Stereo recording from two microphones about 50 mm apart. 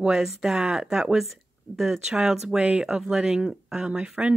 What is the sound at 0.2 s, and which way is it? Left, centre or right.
Speech, centre.